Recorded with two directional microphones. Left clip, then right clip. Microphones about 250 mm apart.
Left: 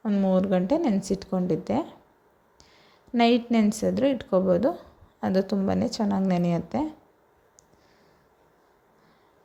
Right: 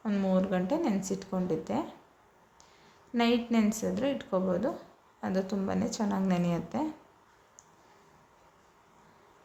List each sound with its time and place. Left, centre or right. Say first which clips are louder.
0.0 s speech: left 5 dB; left
3.1 s speech: left 6 dB; left